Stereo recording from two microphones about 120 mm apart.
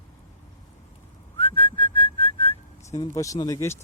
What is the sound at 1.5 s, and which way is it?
Whistling, 45° left (ahead or behind).